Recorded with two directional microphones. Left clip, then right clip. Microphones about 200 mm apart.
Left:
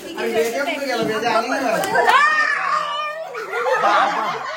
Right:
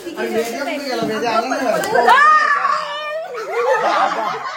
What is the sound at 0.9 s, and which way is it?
Speech, 45° right (ahead or behind).